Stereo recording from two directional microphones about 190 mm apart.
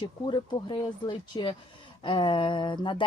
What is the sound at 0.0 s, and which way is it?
Speech, 25° left (ahead or behind).